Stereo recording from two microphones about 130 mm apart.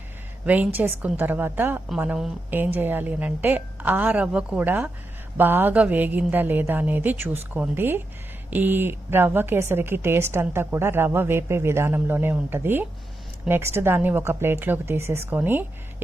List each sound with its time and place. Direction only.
0.4 s a woman's voice: 10° right (ahead or behind)